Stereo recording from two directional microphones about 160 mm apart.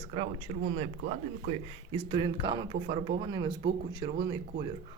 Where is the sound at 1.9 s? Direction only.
35° right (ahead or behind).